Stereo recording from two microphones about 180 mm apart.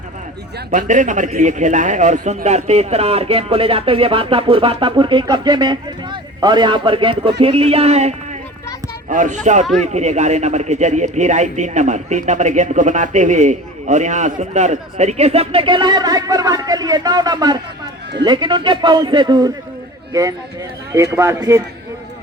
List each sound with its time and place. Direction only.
0.7 s a man's voice: 45° right (ahead or behind); by 19.5 s 25° right (ahead or behind)
20.9 s a man's voice: 15° right (ahead or behind)